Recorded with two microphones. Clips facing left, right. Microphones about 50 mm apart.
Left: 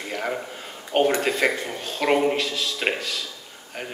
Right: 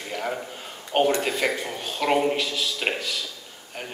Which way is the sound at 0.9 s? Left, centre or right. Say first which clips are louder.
Left 1 dB; centre.